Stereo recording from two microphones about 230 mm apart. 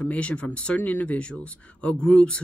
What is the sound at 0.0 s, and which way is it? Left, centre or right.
Speech, centre.